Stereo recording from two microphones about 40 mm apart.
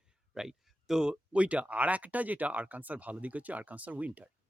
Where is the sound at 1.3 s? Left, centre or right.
Right.